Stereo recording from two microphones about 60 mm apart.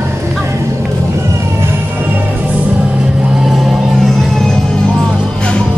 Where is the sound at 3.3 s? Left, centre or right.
Centre.